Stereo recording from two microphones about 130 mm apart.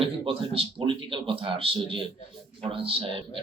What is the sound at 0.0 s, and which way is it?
Speech, 45° right (ahead or behind).